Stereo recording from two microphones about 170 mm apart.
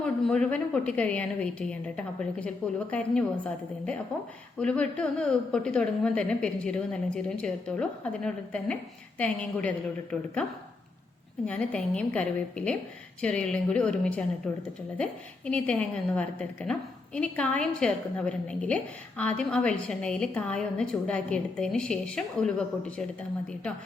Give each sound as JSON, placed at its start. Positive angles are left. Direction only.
{"t": 0.0, "sound": "a woman's voice", "side_deg": 5}
{"t": 11.4, "sound": "a woman's voice", "side_deg": 5}